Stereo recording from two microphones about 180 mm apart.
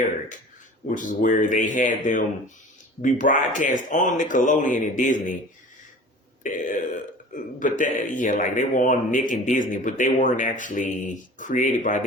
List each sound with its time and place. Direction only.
0.9 s speech: 45° left (ahead or behind)
6.4 s speech: 45° left (ahead or behind)